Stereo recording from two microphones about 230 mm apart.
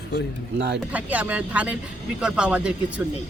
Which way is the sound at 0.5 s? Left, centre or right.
Right.